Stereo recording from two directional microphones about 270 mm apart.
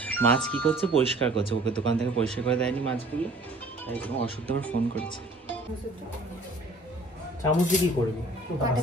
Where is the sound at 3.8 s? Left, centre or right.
Centre.